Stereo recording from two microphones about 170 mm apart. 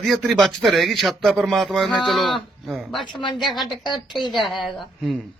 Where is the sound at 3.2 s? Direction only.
25° left (ahead or behind).